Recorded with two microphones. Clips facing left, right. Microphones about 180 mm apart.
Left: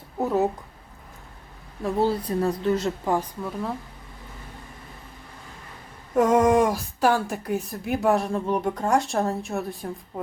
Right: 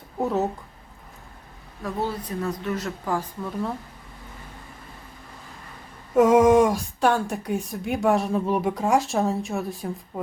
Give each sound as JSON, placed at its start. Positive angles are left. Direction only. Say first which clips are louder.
{"t": 0.2, "sound": "a woman's voice", "louder": "left 1 dB", "side_deg": 10}
{"t": 1.8, "sound": "a woman's voice", "louder": "left 5 dB", "side_deg": 30}
{"t": 6.1, "sound": "speech", "louder": "right 3 dB", "side_deg": 0}